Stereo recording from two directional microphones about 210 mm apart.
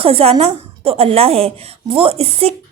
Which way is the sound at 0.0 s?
25° right (ahead or behind).